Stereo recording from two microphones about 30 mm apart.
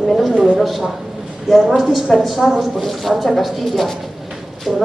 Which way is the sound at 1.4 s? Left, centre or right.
Centre.